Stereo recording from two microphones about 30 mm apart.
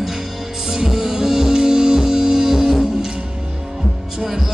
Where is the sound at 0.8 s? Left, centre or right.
Centre.